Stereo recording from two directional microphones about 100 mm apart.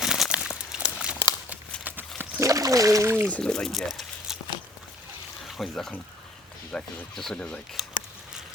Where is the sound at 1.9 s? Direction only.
20° right (ahead or behind).